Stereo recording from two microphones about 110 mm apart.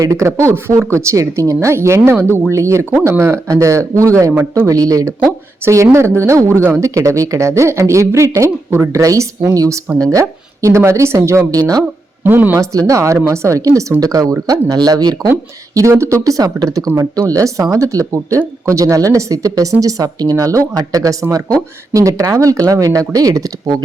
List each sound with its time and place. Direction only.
0.0 s a woman's voice: 30° right (ahead or behind)
4.6 s a woman's voice: 30° right (ahead or behind)
12.2 s speech: 15° right (ahead or behind)
12.9 s a woman's voice: 25° right (ahead or behind)